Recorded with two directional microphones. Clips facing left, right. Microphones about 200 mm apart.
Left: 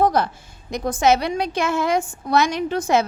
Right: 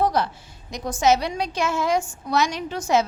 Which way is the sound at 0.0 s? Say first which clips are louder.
Left 3 dB; 50° left (ahead or behind).